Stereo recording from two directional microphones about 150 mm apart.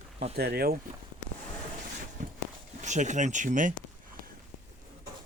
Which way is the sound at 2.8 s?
55° right (ahead or behind).